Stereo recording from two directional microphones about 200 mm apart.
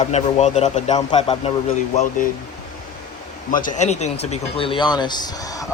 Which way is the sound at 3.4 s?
40° left (ahead or behind).